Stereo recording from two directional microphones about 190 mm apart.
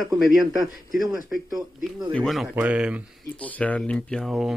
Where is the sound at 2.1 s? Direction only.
Centre (ahead or behind).